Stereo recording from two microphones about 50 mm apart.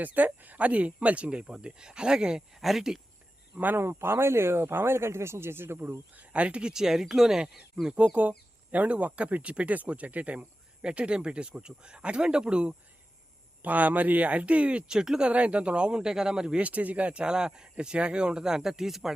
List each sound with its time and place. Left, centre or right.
0.0 s speech: right; by 3.0 s centre
3.8 s speech: right
6.1 s speech: right
7.9 s speech: right
13.6 s speech: right; by 15.3 s centre
15.3 s speech: right
16.6 s speech: right; by 19.1 s centre